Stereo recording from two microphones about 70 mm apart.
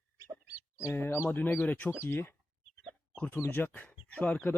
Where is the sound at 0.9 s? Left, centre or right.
Left.